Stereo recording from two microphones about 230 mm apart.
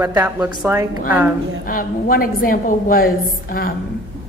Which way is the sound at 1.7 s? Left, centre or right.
Left.